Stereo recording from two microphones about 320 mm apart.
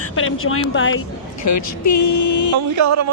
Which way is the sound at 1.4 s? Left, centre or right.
Left.